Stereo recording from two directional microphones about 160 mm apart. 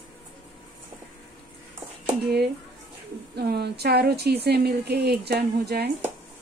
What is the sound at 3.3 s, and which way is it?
Speech, 90° right.